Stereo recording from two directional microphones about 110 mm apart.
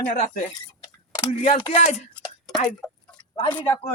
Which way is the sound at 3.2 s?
45° left (ahead or behind).